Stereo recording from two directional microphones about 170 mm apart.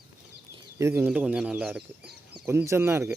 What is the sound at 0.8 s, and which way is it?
Speech, 15° right (ahead or behind).